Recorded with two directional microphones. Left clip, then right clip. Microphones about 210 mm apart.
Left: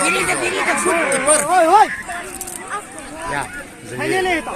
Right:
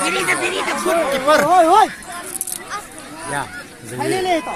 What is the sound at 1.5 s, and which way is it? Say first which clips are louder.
Speech: left 2 dB; 50° right (ahead or behind).